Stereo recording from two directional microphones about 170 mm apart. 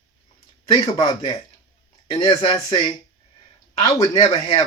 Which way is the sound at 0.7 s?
25° left (ahead or behind).